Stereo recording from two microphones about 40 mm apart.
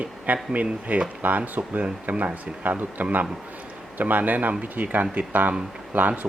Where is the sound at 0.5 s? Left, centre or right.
Right.